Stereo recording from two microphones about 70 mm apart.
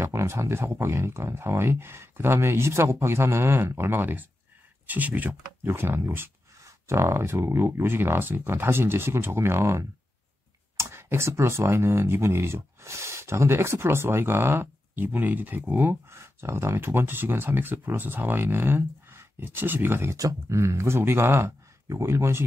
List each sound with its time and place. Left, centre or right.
0.0 s speech: right
5.7 s speech: right
16.1 s speech: right
20.2 s speech: right